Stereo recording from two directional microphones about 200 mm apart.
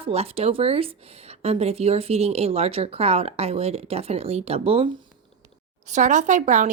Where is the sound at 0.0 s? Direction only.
30° right (ahead or behind).